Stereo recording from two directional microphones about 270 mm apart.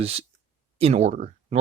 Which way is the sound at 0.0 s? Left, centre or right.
Right.